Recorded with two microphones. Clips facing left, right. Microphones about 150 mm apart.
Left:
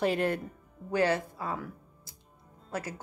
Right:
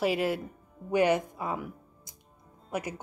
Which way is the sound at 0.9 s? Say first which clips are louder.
Right 3 dB; 15° right (ahead or behind).